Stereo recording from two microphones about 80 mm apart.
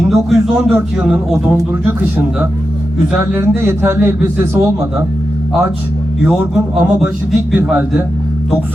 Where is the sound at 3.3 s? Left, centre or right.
Right.